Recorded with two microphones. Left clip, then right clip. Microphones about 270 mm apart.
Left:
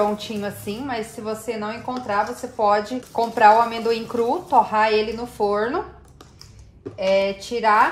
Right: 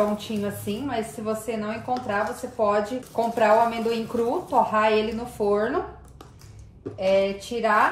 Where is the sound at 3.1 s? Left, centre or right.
Left.